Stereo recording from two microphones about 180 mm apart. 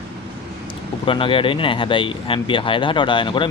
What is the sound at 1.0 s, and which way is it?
Speech, 30° left (ahead or behind).